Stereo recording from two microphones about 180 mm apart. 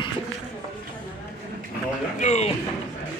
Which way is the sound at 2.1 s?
40° left (ahead or behind).